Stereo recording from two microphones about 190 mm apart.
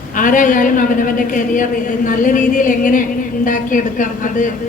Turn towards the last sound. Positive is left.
turn(degrees=45)  # may be behind; listen again after turning